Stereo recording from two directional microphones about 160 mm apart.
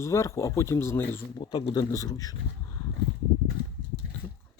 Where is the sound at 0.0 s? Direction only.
20° left (ahead or behind).